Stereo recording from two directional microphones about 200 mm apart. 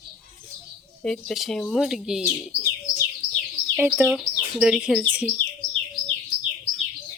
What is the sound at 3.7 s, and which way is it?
Speech, centre (ahead or behind).